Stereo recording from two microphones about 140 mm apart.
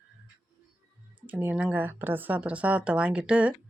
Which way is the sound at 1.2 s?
10° right (ahead or behind).